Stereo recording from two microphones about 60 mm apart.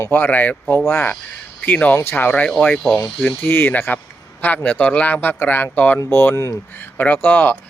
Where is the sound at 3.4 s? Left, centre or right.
Left.